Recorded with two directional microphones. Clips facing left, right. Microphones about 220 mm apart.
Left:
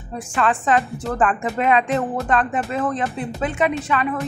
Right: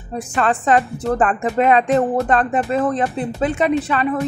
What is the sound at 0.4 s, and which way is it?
A woman's voice, 40° right (ahead or behind).